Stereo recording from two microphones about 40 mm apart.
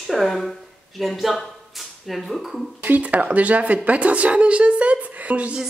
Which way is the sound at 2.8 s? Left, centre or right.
Right.